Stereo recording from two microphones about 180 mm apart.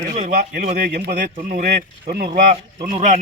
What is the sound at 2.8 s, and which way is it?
Speech, 45° right (ahead or behind).